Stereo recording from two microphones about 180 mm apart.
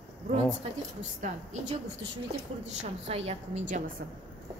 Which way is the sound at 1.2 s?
40° right (ahead or behind).